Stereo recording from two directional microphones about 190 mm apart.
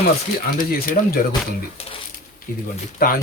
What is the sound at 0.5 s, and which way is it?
Speech, 45° left (ahead or behind).